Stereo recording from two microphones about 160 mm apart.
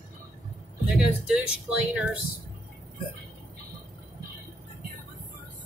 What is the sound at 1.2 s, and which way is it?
Speech, 5° right (ahead or behind).